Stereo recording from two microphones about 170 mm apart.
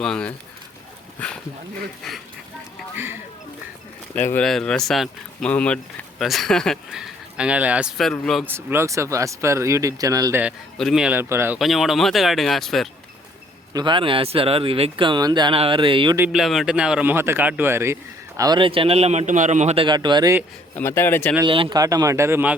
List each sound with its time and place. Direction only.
0.0 s speech: 5° left (ahead or behind)
2.9 s speech: 15° right (ahead or behind)
4.3 s speech: 5° left (ahead or behind)
8.4 s speech: 15° right (ahead or behind)
10.8 s speech: centre (ahead or behind)
11.6 s speech: centre (ahead or behind)
13.7 s speech: 30° right (ahead or behind)
16.1 s speech: 5° right (ahead or behind); by 20.3 s 25° right (ahead or behind)
20.7 s speech: 15° left (ahead or behind)
21.4 s speech: 30° right (ahead or behind); by 22.5 s 15° right (ahead or behind)